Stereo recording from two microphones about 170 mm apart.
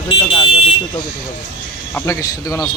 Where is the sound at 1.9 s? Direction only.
20° left (ahead or behind).